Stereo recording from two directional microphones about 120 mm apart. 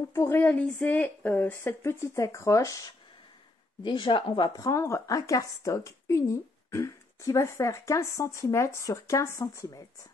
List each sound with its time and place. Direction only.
0.1 s speech: 20° left (ahead or behind)
3.8 s speech: 40° left (ahead or behind)
4.6 s speech: 25° left (ahead or behind)